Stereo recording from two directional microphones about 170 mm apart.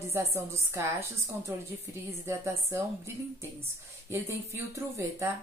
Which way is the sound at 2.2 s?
15° right (ahead or behind).